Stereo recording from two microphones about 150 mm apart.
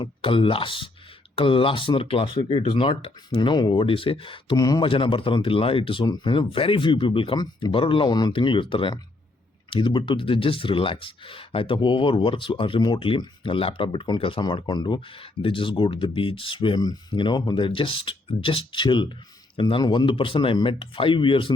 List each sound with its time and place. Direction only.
0.0 s speech: 35° left (ahead or behind)